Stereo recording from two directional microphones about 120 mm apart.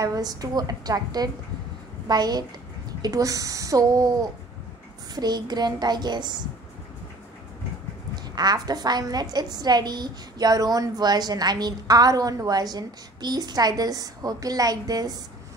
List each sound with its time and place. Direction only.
0.0 s a woman's voice: 30° right (ahead or behind)
8.4 s a woman's voice: 35° right (ahead or behind)